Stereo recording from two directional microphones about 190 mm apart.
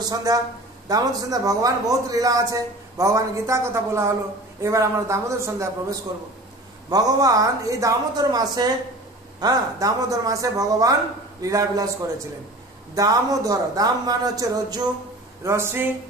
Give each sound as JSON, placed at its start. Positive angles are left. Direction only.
{"t": 0.0, "sound": "a man's voice", "side_deg": -20}